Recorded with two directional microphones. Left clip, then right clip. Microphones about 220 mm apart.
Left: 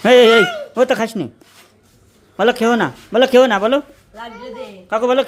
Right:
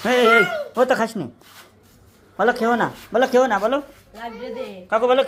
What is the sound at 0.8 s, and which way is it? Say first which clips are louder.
Speech: left 3 dB; 20° left (ahead or behind).